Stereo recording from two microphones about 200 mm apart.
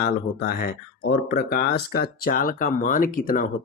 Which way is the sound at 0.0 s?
50° left (ahead or behind).